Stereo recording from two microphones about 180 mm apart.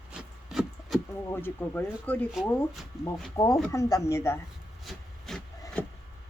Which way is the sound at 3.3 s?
20° left (ahead or behind).